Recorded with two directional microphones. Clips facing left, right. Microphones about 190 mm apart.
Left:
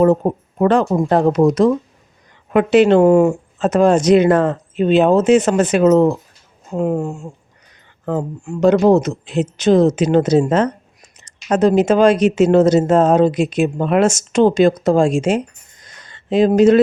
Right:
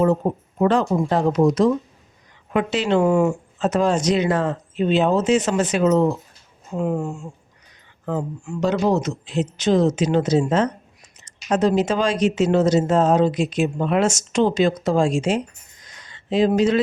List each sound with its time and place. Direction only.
0.2 s speech: 65° left (ahead or behind)
0.6 s speech: 55° left (ahead or behind)
3.0 s speech: 40° left (ahead or behind)
3.7 s speech: 55° left (ahead or behind)
6.7 s speech: 45° left (ahead or behind)
8.4 s speech: 55° left (ahead or behind)